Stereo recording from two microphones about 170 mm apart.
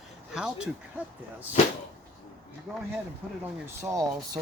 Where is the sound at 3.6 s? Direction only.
15° right (ahead or behind).